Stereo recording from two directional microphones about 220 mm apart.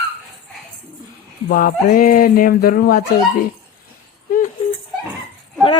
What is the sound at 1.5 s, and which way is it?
Speech, 40° left (ahead or behind).